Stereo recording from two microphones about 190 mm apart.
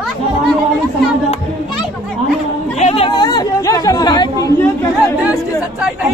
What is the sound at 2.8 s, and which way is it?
Chatter, 35° left (ahead or behind).